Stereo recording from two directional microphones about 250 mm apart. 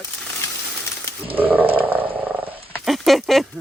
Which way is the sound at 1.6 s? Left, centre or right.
Right.